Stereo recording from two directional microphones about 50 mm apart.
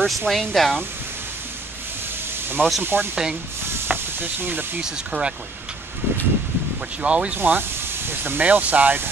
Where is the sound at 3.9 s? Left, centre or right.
Right.